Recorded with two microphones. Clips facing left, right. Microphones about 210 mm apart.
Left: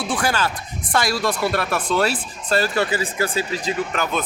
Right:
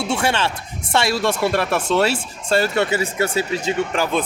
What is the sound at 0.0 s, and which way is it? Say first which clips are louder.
Speech: right 2 dB; 25° right (ahead or behind).